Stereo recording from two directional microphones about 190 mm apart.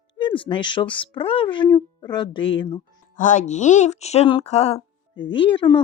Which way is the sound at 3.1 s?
40° left (ahead or behind).